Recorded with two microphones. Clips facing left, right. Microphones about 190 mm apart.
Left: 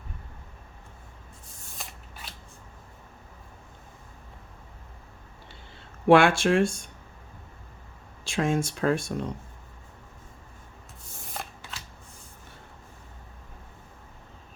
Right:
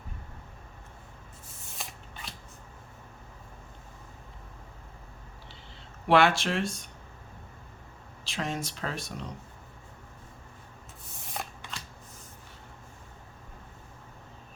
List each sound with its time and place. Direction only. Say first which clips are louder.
1.8 s shuffling cards: right 1 dB; centre (ahead or behind)
6.1 s speech: left 5 dB; 50° left (ahead or behind)
8.2 s speech: left 8 dB; 50° left (ahead or behind)
11.3 s shuffling cards: right 1 dB; centre (ahead or behind)